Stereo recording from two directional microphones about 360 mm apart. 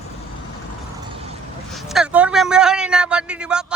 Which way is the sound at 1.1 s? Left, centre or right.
Centre.